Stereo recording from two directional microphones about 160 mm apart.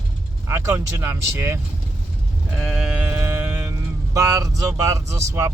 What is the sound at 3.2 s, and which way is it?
Music, 15° right (ahead or behind).